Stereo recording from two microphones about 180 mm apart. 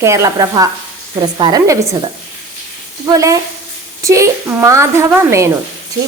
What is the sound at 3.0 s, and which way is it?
Speech, 20° right (ahead or behind).